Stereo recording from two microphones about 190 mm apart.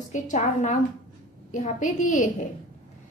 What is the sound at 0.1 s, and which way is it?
A woman's voice, 40° left (ahead or behind).